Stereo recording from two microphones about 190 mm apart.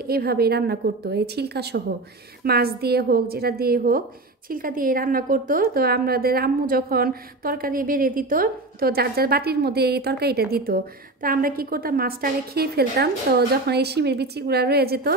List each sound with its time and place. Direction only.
0.0 s a woman's voice: 55° right (ahead or behind)